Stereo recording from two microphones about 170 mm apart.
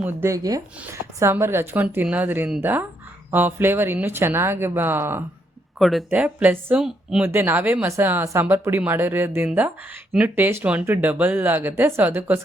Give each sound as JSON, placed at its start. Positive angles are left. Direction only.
{"t": 0.0, "sound": "speech", "side_deg": -15}
{"t": 5.8, "sound": "speech", "side_deg": 0}